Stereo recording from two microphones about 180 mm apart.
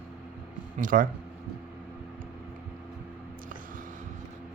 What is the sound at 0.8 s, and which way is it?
Speech, 50° right (ahead or behind).